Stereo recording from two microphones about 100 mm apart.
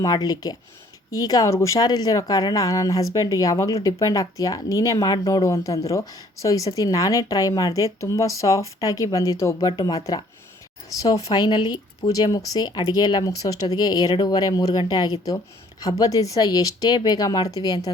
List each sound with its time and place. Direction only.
0.0 s speech: 40° left (ahead or behind)